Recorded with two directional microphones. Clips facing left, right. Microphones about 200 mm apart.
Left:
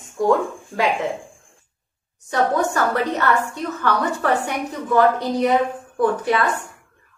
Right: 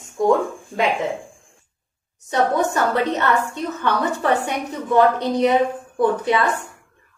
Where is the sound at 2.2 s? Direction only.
20° right (ahead or behind).